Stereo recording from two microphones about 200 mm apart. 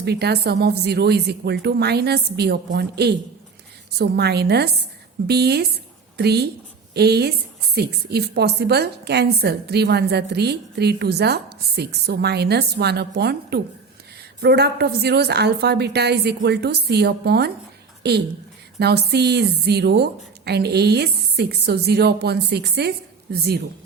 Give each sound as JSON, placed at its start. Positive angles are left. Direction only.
{"t": 0.0, "sound": "a woman's voice", "side_deg": -55}
{"t": 18.8, "sound": "a woman's voice", "side_deg": -55}